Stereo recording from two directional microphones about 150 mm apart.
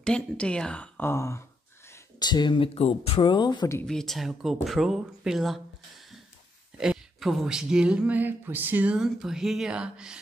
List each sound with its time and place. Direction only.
0.0 s speech: 5° left (ahead or behind); by 3.6 s 30° left (ahead or behind)
3.8 s speech: 5° left (ahead or behind)
6.8 s speech: centre (ahead or behind)